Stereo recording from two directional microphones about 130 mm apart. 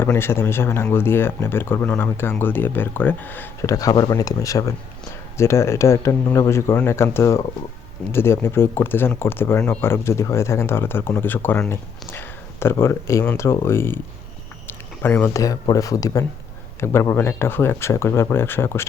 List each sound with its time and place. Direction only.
0.0 s speech: 20° left (ahead or behind)
14.7 s a sound: 15° left (ahead or behind)
15.6 s speech: 25° left (ahead or behind)